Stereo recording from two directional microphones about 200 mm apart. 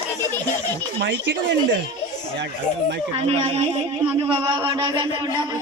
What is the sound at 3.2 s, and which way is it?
Speech, 30° right (ahead or behind).